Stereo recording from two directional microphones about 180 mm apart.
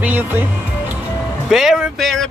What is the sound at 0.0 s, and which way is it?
Music, 10° right (ahead or behind).